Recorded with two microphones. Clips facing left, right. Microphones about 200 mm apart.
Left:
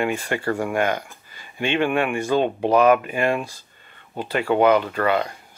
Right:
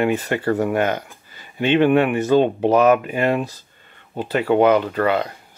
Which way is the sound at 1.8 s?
20° right (ahead or behind).